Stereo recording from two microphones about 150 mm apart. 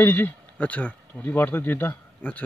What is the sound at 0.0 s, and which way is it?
Speech, 15° left (ahead or behind).